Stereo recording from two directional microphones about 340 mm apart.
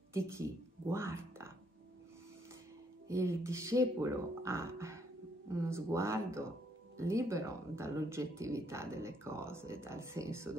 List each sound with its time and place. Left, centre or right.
0.1 s speech: centre
3.1 s speech: centre